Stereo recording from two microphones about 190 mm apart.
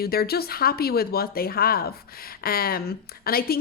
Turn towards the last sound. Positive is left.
turn(degrees=55)  # may be behind; listen again after turning